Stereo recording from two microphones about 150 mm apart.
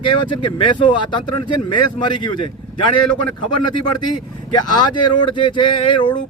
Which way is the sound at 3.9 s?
30° left (ahead or behind).